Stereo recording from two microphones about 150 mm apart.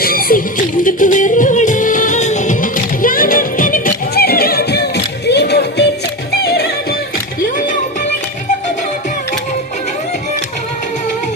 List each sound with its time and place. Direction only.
0.0 s music: 75° left (ahead or behind)
0.9 s music: 60° left (ahead or behind); by 6.7 s 90° left